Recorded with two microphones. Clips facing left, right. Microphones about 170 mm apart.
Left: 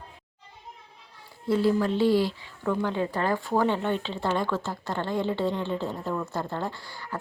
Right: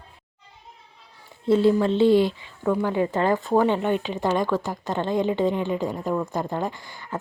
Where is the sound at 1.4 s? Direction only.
25° right (ahead or behind).